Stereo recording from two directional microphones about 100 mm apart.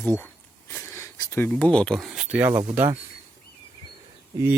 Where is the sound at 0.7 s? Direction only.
25° left (ahead or behind).